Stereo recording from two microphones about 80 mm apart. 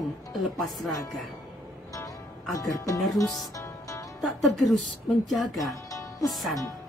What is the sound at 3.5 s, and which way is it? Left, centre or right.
Music, left.